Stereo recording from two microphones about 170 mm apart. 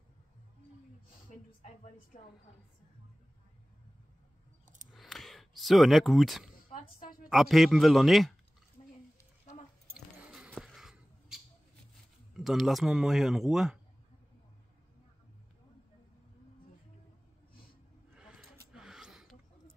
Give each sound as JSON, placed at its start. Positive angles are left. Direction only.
{"t": 4.9, "sound": "speech", "side_deg": 0}
{"t": 6.7, "sound": "oink", "side_deg": 55}
{"t": 7.2, "sound": "speech", "side_deg": 0}
{"t": 10.1, "sound": "a sound", "side_deg": -5}
{"t": 12.4, "sound": "speech", "side_deg": 0}
{"t": 18.1, "sound": "a sound", "side_deg": -5}